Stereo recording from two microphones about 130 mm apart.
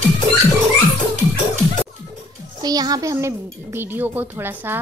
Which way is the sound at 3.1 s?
15° right (ahead or behind).